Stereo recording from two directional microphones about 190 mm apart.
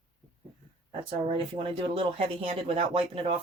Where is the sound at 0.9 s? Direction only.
25° right (ahead or behind).